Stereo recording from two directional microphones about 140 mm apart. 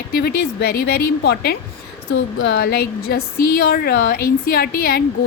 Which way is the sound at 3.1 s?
90° left.